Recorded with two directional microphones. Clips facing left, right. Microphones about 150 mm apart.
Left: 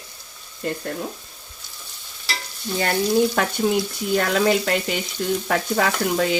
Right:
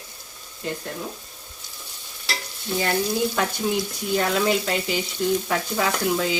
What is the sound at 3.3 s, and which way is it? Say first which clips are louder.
Frying: left 3 dB; 60° left (ahead or behind).